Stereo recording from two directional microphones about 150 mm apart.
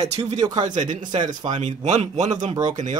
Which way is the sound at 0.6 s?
55° right (ahead or behind).